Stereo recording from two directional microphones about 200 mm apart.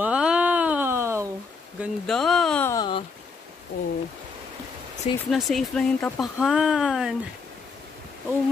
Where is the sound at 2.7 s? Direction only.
20° left (ahead or behind).